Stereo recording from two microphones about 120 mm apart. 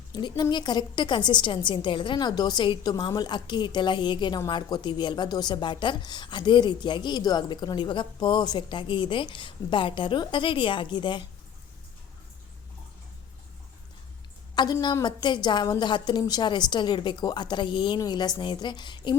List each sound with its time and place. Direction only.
0.1 s a woman's voice: 35° left (ahead or behind)
14.5 s a woman's voice: 35° left (ahead or behind)